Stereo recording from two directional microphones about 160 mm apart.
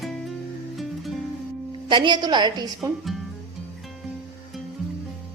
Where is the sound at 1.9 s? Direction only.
30° right (ahead or behind).